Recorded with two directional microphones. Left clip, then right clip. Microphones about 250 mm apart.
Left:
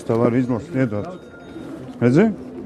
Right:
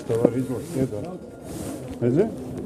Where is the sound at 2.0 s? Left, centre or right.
Left.